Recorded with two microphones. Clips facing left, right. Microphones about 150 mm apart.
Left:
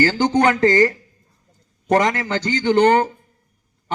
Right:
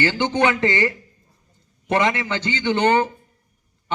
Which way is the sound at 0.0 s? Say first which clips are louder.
Left 3 dB; 40° left (ahead or behind).